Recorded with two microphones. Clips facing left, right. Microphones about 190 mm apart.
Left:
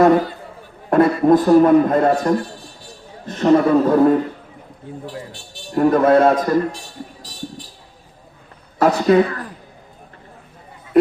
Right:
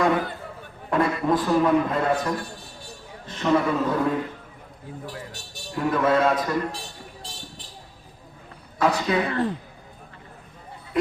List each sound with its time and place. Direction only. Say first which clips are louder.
0.0 s a man's voice: left 9 dB; 40° left (ahead or behind)
5.0 s speech: left 5 dB; 30° left (ahead or behind)
5.7 s a man's voice: left 8 dB; 50° left (ahead or behind)
8.8 s a man's voice: left 9 dB; 45° left (ahead or behind)
9.2 s speech: right 2 dB; 25° right (ahead or behind)